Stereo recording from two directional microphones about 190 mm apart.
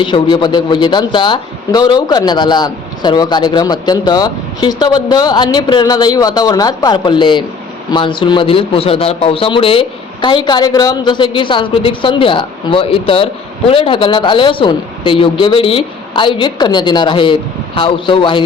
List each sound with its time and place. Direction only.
0.0 s a man's voice: 25° left (ahead or behind)